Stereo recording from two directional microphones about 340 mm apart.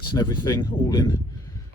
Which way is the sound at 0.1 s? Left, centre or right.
Centre.